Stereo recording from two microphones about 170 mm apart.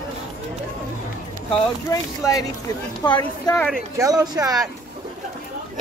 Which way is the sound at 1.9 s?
20° left (ahead or behind).